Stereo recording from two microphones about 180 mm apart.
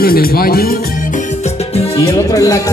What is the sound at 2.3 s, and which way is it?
Speech, 20° left (ahead or behind).